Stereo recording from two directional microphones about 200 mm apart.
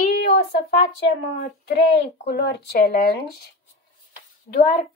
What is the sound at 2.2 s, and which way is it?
Speech, 60° left (ahead or behind).